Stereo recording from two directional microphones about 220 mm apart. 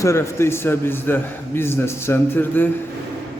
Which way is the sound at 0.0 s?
10° left (ahead or behind).